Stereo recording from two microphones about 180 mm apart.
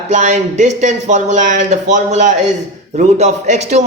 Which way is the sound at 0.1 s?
40° right (ahead or behind).